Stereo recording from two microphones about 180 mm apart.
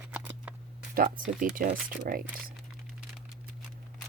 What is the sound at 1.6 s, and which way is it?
Speech, 50° right (ahead or behind).